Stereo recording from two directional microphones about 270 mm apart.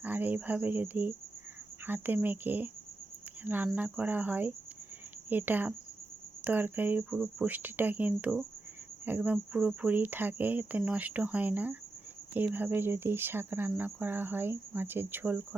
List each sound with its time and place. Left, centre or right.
0.0 s speech: centre